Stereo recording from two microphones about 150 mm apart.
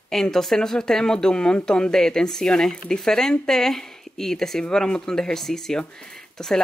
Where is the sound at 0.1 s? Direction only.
Centre (ahead or behind).